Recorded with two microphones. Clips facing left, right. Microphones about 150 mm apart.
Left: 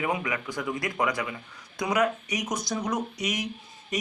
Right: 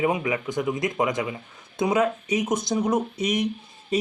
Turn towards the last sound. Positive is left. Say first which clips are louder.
# right 7 dB
turn(degrees=-30)  # may be behind; listen again after turning